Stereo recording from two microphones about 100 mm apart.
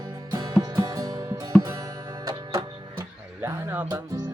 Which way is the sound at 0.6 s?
40° right (ahead or behind).